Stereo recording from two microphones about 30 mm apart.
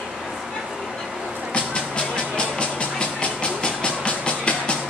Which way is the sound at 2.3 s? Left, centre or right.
Left.